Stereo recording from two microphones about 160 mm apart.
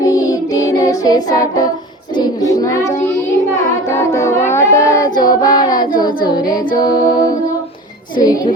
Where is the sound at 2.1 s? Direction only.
20° left (ahead or behind).